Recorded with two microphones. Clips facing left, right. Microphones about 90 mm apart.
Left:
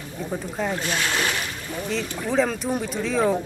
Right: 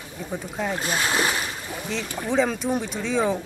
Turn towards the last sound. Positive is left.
turn(degrees=0)  # may be behind; listen again after turning